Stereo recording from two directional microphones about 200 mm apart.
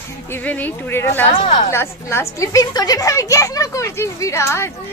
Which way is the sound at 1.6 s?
15° left (ahead or behind).